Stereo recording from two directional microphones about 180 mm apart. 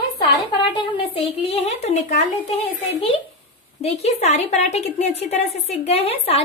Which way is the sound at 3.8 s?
35° left (ahead or behind).